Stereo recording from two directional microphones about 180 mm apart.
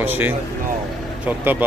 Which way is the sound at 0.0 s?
10° right (ahead or behind).